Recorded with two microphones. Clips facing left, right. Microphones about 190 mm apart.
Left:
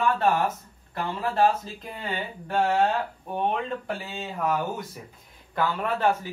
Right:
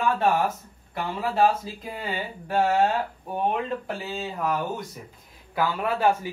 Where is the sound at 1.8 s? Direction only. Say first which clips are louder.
Right 1 dB; 5° right (ahead or behind).